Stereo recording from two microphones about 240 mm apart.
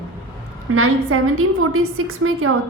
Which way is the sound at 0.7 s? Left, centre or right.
Right.